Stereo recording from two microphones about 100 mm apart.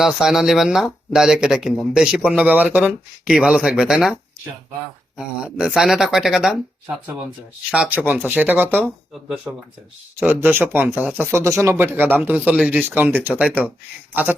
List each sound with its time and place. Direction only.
0.0 s speech: 5° right (ahead or behind)
5.1 s speech: 10° right (ahead or behind)
7.7 s speech: 15° right (ahead or behind)